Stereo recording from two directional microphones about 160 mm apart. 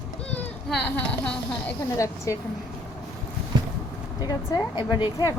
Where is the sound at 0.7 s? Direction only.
5° left (ahead or behind).